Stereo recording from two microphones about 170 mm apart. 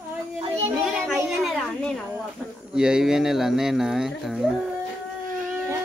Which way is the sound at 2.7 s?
5° right (ahead or behind).